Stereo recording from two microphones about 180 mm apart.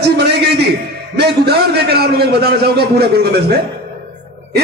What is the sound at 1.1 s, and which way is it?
A man's voice, 65° right (ahead or behind).